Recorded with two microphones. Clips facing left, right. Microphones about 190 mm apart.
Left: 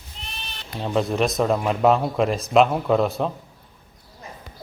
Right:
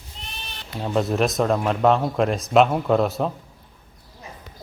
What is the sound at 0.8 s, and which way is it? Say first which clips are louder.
Speech: even; centre (ahead or behind).